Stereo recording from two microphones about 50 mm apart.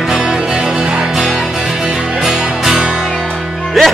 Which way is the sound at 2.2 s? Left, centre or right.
Centre.